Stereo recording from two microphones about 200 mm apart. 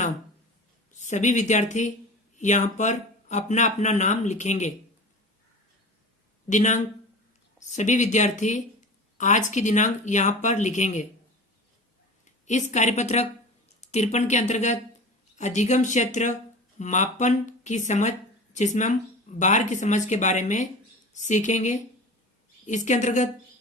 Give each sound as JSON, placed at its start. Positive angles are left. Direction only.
{"t": 0.9, "sound": "speech", "side_deg": 35}
{"t": 6.5, "sound": "speech", "side_deg": 35}
{"t": 12.5, "sound": "speech", "side_deg": 35}